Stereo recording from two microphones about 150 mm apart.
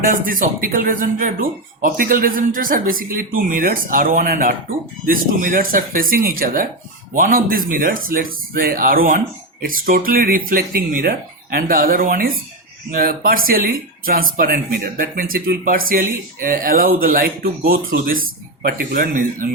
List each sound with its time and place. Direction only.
0.0 s speech: 65° right (ahead or behind)